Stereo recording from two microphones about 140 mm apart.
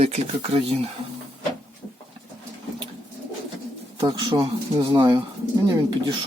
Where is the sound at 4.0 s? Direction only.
30° right (ahead or behind).